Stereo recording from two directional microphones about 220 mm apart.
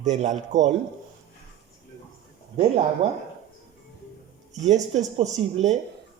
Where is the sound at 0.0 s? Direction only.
30° right (ahead or behind).